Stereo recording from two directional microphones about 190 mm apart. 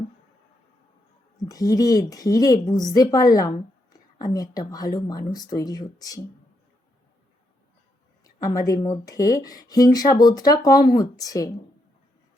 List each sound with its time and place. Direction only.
1.4 s speech: 20° left (ahead or behind)
8.2 s speech: 20° left (ahead or behind)